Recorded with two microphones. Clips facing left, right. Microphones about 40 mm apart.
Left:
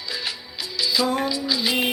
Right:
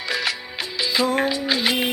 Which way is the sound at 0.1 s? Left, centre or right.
Right.